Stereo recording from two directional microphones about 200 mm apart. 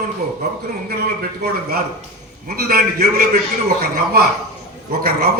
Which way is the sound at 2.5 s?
50° right (ahead or behind).